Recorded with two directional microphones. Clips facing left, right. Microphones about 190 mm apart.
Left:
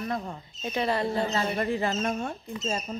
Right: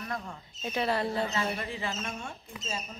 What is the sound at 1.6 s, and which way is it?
Speech, 45° left (ahead or behind).